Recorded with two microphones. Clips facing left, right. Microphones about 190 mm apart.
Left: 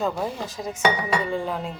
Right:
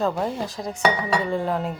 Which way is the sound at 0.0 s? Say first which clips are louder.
Right 2 dB; centre (ahead or behind).